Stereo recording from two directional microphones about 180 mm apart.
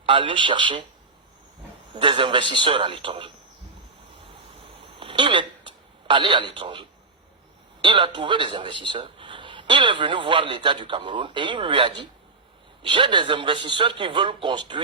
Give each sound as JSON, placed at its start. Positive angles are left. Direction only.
{"t": 0.0, "sound": "a man's voice", "side_deg": -30}
{"t": 1.9, "sound": "a man's voice", "side_deg": -30}
{"t": 4.8, "sound": "a sound", "side_deg": -30}
{"t": 7.8, "sound": "a man's voice", "side_deg": -25}